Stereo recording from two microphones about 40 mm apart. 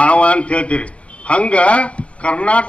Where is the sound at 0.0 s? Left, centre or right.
Left.